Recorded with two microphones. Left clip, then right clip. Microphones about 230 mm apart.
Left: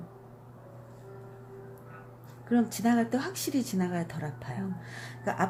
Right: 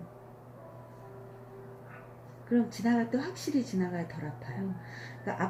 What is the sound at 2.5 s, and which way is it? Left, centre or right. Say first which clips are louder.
A woman's voice: left 2 dB; left.